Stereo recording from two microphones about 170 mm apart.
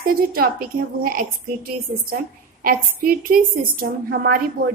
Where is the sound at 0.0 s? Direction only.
60° right (ahead or behind).